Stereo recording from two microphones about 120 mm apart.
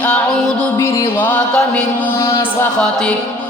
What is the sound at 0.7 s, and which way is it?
Music, 30° left (ahead or behind).